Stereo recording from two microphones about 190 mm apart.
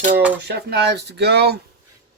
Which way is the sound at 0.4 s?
60° right (ahead or behind).